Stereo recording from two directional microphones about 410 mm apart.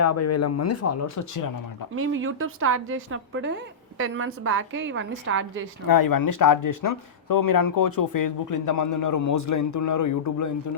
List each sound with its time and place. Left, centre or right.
0.0 s speech: left
2.0 s a woman's voice: right
5.9 s speech: left